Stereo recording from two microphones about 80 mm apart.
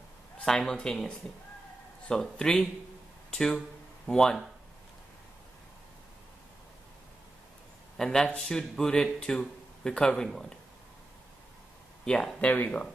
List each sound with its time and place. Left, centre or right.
0.5 s speech: centre
8.0 s speech: centre
12.0 s speech: centre